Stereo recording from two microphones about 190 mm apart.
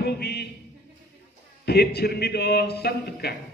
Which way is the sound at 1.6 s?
55° left (ahead or behind).